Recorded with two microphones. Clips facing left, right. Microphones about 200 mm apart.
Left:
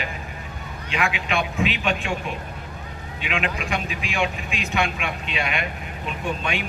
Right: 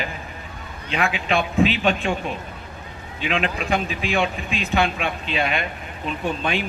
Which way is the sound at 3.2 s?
35° right (ahead or behind).